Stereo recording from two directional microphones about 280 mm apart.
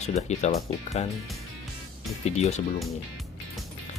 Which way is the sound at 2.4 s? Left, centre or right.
Left.